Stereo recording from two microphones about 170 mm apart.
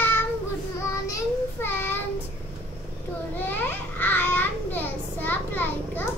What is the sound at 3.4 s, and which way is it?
A child's voice, 10° left (ahead or behind).